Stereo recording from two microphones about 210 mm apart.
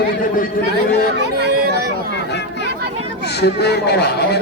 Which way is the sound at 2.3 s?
55° left (ahead or behind).